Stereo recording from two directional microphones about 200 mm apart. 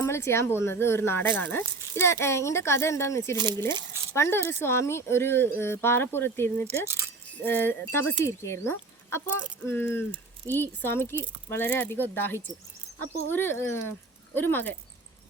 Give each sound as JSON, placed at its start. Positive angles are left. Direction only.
{"t": 0.0, "sound": "speech", "side_deg": 15}
{"t": 3.3, "sound": "speech", "side_deg": -20}
{"t": 4.1, "sound": "speech", "side_deg": 15}
{"t": 6.7, "sound": "speech", "side_deg": -15}
{"t": 7.4, "sound": "speech", "side_deg": 10}